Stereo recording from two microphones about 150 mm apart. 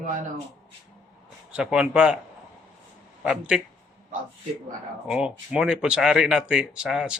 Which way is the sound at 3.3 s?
5° right (ahead or behind).